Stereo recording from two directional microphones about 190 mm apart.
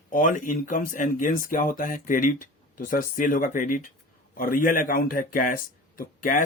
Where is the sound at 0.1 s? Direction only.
45° left (ahead or behind).